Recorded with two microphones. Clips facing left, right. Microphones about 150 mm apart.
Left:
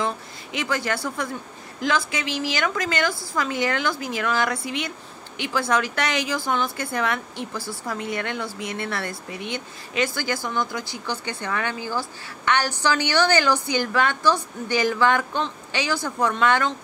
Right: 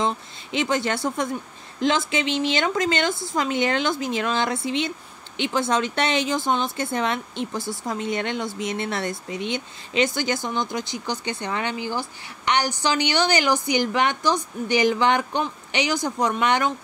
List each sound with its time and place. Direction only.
0.0 s speech: 25° right (ahead or behind)